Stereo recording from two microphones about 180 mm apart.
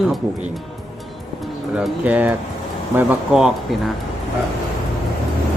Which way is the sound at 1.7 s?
10° right (ahead or behind).